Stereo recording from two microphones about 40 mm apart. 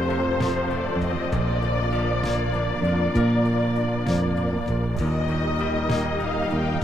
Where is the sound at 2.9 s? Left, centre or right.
Centre.